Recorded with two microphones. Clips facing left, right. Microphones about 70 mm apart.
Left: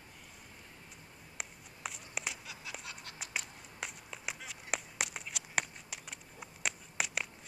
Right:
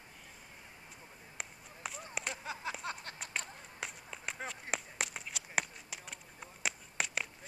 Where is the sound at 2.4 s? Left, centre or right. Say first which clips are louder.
Right 7 dB; right.